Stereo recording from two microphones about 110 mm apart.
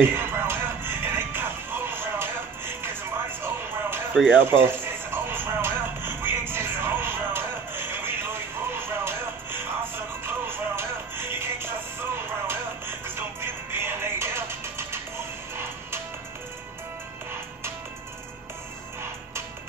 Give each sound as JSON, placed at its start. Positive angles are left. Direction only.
{"t": 0.1, "sound": "music", "side_deg": -20}
{"t": 4.1, "sound": "speech", "side_deg": 0}
{"t": 4.5, "sound": "music", "side_deg": -20}